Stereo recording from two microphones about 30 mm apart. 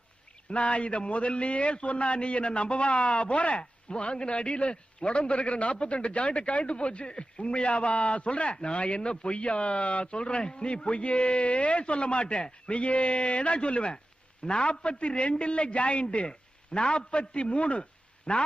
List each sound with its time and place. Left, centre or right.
0.5 s speech: left